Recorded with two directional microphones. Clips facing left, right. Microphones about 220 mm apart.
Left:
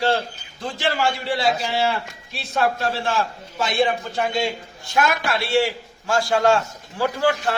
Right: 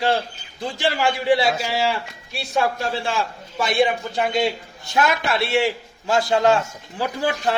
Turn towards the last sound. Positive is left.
turn(degrees=-20)  # may be behind; listen again after turning